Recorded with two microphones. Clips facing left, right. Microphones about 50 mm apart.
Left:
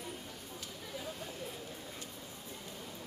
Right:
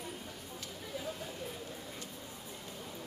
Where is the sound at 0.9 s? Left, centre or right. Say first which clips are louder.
Right 2 dB; centre.